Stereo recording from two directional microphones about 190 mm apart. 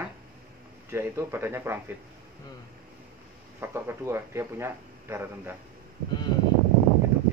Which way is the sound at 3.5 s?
15° right (ahead or behind).